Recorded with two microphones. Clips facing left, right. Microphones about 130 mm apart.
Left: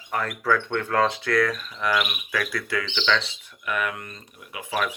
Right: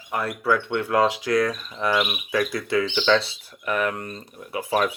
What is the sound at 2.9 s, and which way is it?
Speech, 35° right (ahead or behind).